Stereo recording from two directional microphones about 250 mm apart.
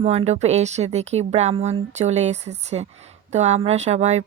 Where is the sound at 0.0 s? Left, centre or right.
Right.